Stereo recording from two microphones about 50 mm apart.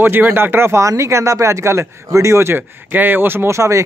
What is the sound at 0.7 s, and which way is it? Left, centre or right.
Speech, right.